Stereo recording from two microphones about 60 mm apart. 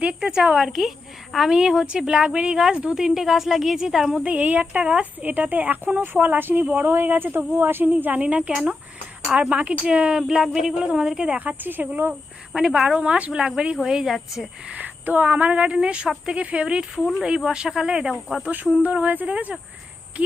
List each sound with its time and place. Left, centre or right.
0.0 s a woman's voice: centre
4.2 s speech: right
5.2 s a woman's voice: right; by 11.3 s centre
11.3 s speech: right
12.5 s a woman's voice: centre
14.7 s speech: right
16.9 s speech: centre
17.2 s a woman's voice: centre
18.1 s speech: centre
18.4 s speech: right